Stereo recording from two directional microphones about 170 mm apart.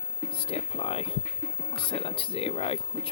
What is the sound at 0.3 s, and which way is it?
Speech, 30° left (ahead or behind).